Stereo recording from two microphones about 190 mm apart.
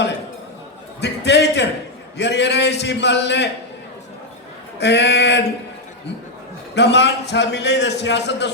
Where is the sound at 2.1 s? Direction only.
65° left (ahead or behind).